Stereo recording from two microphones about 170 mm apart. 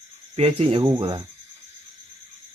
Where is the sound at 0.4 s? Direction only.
35° right (ahead or behind).